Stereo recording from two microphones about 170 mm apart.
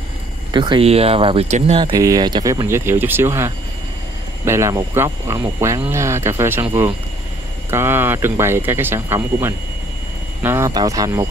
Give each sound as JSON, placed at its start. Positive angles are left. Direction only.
{"t": 0.5, "sound": "speech", "side_deg": -25}
{"t": 1.9, "sound": "speech", "side_deg": -20}